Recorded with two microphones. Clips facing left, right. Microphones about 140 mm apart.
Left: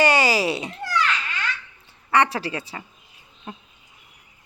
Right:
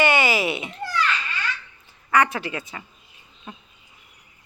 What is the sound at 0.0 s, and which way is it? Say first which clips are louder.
Meow: left 1 dB; 35° left (ahead or behind).